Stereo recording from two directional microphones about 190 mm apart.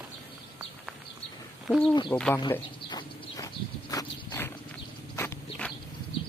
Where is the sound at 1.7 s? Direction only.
Centre (ahead or behind).